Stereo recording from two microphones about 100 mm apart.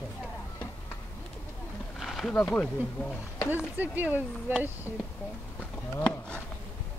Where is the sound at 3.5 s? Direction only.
15° right (ahead or behind).